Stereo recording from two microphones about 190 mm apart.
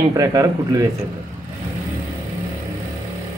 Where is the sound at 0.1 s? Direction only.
15° right (ahead or behind).